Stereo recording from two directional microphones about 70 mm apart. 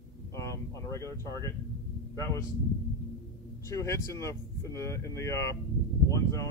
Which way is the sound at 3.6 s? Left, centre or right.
Left.